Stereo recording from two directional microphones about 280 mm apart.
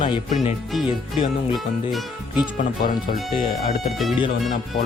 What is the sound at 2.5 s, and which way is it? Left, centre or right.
Speech, left.